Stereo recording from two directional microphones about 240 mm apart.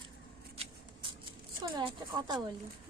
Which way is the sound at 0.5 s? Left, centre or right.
Right.